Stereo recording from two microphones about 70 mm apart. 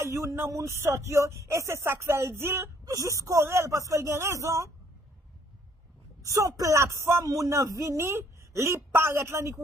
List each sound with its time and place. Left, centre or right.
0.0 s speech: right
2.8 s speech: right
6.2 s speech: right